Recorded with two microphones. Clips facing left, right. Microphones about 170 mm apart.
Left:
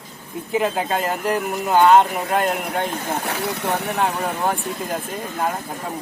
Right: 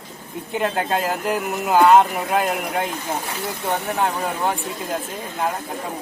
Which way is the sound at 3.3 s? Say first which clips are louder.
Left 3 dB; 70° left (ahead or behind).